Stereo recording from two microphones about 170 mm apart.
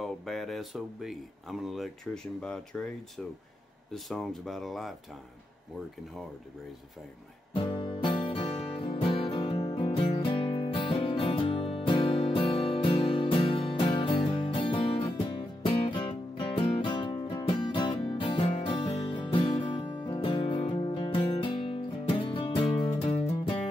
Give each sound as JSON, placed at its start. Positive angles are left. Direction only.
{"t": 0.0, "sound": "speech", "side_deg": 0}
{"t": 3.9, "sound": "speech", "side_deg": 0}
{"t": 7.7, "sound": "music", "side_deg": 30}